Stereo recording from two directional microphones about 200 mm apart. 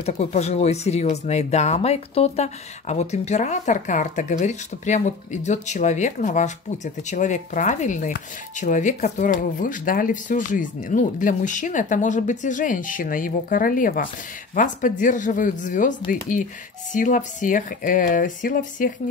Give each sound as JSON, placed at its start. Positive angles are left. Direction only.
{"t": 0.0, "sound": "speech", "side_deg": 35}